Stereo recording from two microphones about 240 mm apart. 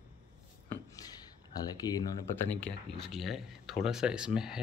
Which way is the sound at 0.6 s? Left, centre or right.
Centre.